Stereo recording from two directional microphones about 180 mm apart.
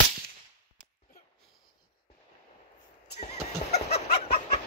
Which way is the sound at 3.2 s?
40° left (ahead or behind).